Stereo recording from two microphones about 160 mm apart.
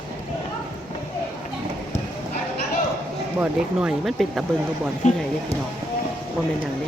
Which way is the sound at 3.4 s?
5° right (ahead or behind).